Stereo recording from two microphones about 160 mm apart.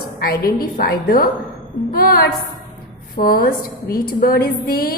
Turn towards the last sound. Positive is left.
turn(degrees=70)  # may be behind; listen again after turning